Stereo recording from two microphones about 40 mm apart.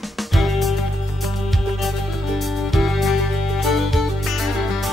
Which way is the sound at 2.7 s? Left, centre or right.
Centre.